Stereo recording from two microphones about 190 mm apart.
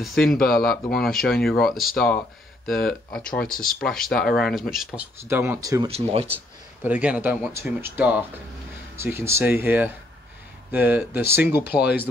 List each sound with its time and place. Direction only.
0.0 s speech: centre (ahead or behind)
5.3 s speech: 15° right (ahead or behind)
5.9 s speech: 30° right (ahead or behind)
6.3 s speech: 10° right (ahead or behind)